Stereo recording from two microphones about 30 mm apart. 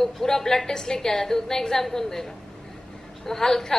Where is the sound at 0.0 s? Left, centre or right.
Centre.